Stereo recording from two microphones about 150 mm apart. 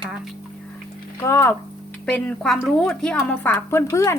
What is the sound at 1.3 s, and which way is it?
A woman's voice, 20° left (ahead or behind).